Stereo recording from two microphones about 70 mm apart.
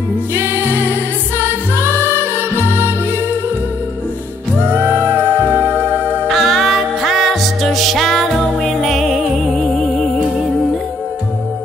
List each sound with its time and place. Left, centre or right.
0.3 s music: right
4.6 s music: right
6.2 s music: centre